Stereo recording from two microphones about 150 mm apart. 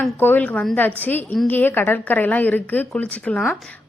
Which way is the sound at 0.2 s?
10° left (ahead or behind).